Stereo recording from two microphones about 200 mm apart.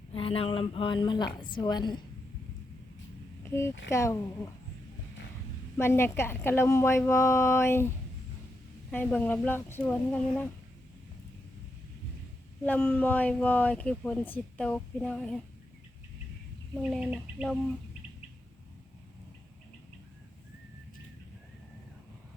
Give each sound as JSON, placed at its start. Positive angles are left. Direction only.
{"t": 0.1, "sound": "speech", "side_deg": 30}
{"t": 3.4, "sound": "a sound", "side_deg": 15}
{"t": 3.8, "sound": "speech", "side_deg": 15}
{"t": 5.7, "sound": "speech", "side_deg": 10}
{"t": 8.9, "sound": "speech", "side_deg": 10}
{"t": 12.6, "sound": "speech", "side_deg": 10}
{"t": 16.9, "sound": "speech", "side_deg": -5}